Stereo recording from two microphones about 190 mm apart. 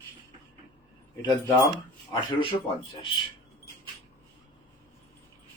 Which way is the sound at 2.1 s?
25° left (ahead or behind).